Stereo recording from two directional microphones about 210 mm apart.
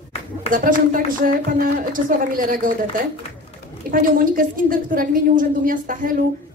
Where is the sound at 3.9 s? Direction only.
40° right (ahead or behind).